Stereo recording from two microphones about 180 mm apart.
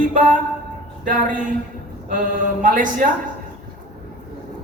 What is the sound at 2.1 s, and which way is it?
Speech, 45° right (ahead or behind).